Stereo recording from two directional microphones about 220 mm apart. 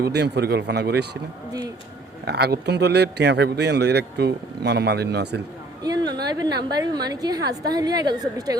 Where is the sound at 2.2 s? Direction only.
45° right (ahead or behind).